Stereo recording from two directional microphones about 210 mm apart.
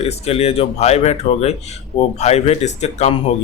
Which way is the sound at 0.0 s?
30° left (ahead or behind).